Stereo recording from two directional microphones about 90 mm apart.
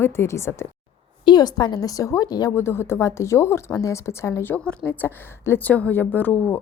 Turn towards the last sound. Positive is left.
turn(degrees=20)  # may be behind; listen again after turning